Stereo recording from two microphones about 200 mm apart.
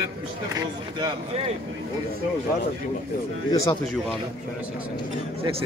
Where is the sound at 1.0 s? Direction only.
30° right (ahead or behind).